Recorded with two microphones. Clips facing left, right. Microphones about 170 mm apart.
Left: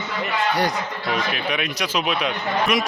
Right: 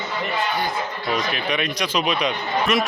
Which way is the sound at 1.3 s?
5° left (ahead or behind).